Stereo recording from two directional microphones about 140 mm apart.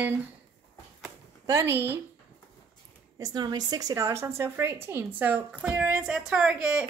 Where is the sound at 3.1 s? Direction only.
30° right (ahead or behind).